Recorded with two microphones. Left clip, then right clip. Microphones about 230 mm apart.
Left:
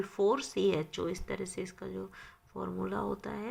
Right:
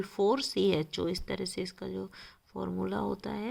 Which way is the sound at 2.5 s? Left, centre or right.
Right.